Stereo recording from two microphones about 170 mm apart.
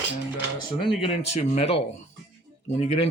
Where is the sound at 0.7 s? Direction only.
30° left (ahead or behind).